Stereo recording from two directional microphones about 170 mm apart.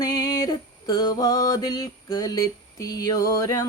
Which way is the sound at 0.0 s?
20° left (ahead or behind).